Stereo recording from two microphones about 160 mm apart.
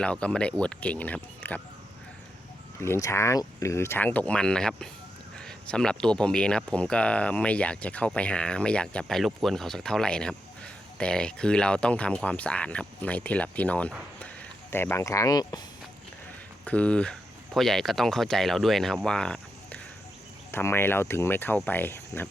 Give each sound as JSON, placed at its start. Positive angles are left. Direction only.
{"t": 0.0, "sound": "speech", "side_deg": 5}
{"t": 2.8, "sound": "speech", "side_deg": 15}
{"t": 16.6, "sound": "speech", "side_deg": 10}